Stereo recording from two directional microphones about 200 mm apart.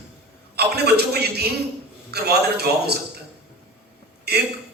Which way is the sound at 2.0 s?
55° right (ahead or behind).